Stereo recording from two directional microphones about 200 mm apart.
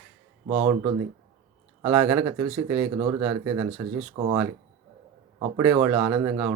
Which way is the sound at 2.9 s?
25° right (ahead or behind).